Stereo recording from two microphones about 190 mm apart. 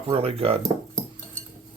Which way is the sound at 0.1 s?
30° right (ahead or behind).